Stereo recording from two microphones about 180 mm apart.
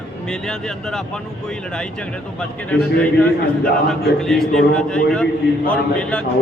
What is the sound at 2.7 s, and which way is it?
A man's voice, 10° left (ahead or behind).